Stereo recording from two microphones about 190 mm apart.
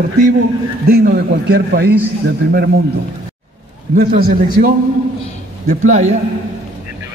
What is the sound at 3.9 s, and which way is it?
A man's voice, 45° right (ahead or behind).